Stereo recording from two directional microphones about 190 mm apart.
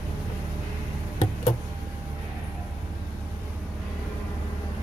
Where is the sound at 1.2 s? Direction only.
30° left (ahead or behind).